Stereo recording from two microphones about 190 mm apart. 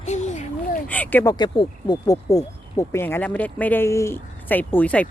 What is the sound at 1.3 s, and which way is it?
Speech, 20° left (ahead or behind).